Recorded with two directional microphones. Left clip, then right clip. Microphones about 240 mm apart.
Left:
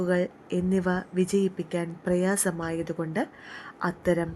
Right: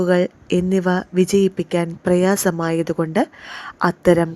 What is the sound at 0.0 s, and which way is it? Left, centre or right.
Speech, right.